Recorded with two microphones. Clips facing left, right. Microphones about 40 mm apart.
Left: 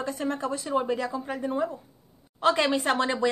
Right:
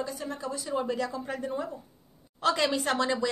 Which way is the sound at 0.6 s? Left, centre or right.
Left.